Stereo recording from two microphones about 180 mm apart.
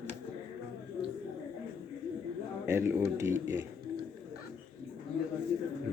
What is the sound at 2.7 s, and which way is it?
Speech, 15° right (ahead or behind).